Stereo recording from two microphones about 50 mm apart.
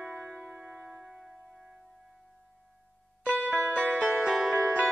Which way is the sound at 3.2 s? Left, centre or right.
Right.